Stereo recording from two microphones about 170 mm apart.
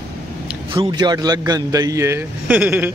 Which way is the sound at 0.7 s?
30° right (ahead or behind).